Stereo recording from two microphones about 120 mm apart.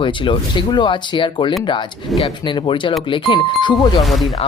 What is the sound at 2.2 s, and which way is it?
Speech, 55° left (ahead or behind).